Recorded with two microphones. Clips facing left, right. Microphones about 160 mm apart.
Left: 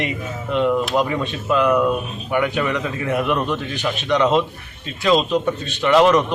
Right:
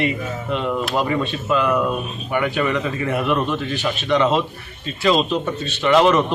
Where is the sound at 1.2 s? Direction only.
15° left (ahead or behind).